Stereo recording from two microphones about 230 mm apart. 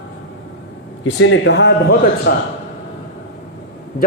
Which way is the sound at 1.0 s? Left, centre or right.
Left.